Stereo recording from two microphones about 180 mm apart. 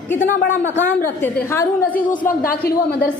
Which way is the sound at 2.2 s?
55° left (ahead or behind).